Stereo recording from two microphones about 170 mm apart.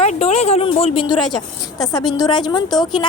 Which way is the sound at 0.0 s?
40° left (ahead or behind).